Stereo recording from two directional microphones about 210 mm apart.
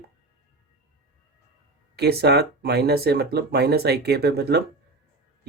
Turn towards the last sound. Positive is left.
turn(degrees=-50)  # may be behind; listen again after turning